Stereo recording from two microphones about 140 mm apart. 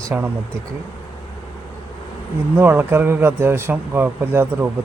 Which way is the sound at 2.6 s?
15° right (ahead or behind).